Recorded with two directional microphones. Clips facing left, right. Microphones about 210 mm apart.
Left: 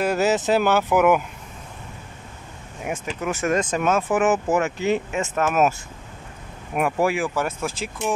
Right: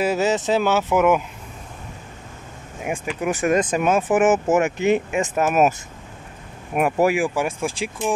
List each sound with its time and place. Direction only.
0.0 s speech: centre (ahead or behind)
2.8 s speech: 10° right (ahead or behind)
6.8 s speech: 15° right (ahead or behind)